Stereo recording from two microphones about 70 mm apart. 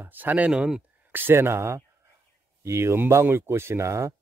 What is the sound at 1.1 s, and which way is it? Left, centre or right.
Speech, right.